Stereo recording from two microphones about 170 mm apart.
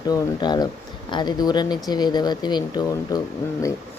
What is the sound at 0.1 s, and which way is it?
Speech, 25° left (ahead or behind).